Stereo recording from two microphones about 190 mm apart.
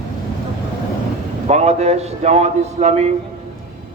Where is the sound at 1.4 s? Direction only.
35° right (ahead or behind).